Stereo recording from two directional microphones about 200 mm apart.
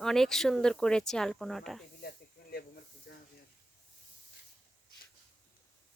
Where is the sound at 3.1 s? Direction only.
55° left (ahead or behind).